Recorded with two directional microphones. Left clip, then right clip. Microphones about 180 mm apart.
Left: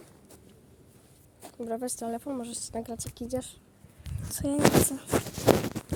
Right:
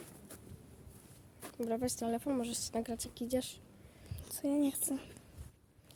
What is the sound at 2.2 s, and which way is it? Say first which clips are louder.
A woman's voice: left 1 dB; 5° left (ahead or behind).